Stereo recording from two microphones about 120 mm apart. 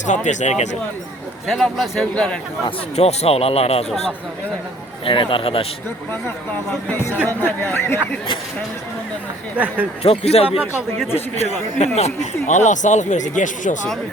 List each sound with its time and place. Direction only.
0.0 s speech: 90° left
1.5 s a man's voice: 5° left (ahead or behind)
2.9 s speech: 65° left (ahead or behind)
5.0 s speech: 45° left (ahead or behind)
6.7 s speech: 10° left (ahead or behind)
10.0 s speech: 60° left (ahead or behind)
10.6 s a man's voice: 5° right (ahead or behind)
11.9 s speech: 70° left (ahead or behind); by 13.7 s 90° left